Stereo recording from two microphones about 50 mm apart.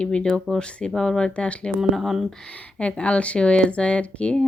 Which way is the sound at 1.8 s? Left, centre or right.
Centre.